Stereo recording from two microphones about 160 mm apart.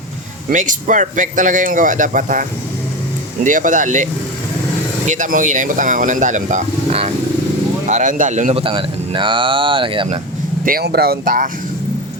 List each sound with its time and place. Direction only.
0.5 s speech: 55° right (ahead or behind); by 10.2 s 35° right (ahead or behind)
10.7 s speech: 75° right (ahead or behind)